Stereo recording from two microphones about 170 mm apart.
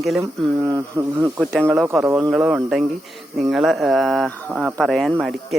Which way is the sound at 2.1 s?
20° right (ahead or behind).